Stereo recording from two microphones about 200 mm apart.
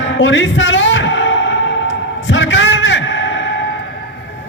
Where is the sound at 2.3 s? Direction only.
70° left (ahead or behind).